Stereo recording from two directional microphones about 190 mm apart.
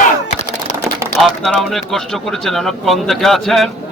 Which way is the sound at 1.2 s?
5° left (ahead or behind).